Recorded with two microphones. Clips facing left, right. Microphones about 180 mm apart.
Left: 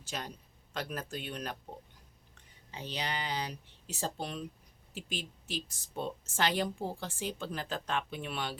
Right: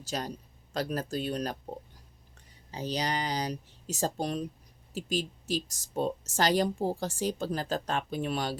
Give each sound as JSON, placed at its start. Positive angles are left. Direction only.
{"t": 0.0, "sound": "speech", "side_deg": -35}
{"t": 2.7, "sound": "speech", "side_deg": -40}